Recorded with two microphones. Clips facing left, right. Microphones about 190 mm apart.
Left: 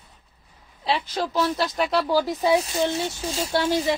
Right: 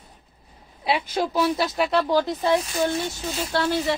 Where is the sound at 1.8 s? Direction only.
5° left (ahead or behind).